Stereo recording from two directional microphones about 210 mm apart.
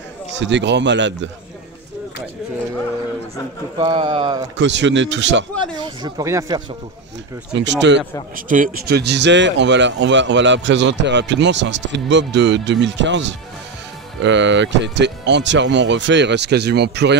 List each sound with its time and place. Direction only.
0.4 s speech: 55° right (ahead or behind)
3.7 s speech: 25° right (ahead or behind)
4.6 s speech: 60° right (ahead or behind)
6.0 s speech: 15° right (ahead or behind)
7.5 s speech: 55° right (ahead or behind)
8.4 s speech: 40° right (ahead or behind)